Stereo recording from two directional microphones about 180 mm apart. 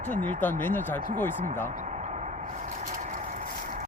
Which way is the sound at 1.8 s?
40° right (ahead or behind).